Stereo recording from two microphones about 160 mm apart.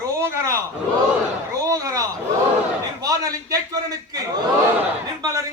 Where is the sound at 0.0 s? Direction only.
20° right (ahead or behind).